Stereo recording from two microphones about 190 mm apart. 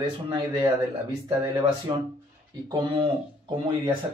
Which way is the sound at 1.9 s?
25° right (ahead or behind).